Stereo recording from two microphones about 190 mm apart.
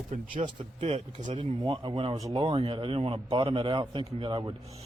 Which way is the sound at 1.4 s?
25° right (ahead or behind).